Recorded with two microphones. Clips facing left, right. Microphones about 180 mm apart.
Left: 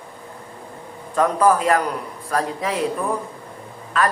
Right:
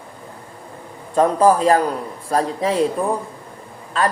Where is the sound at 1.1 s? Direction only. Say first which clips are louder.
Right 3 dB; 30° right (ahead or behind).